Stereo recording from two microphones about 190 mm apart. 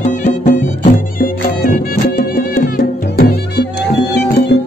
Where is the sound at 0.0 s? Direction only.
40° left (ahead or behind).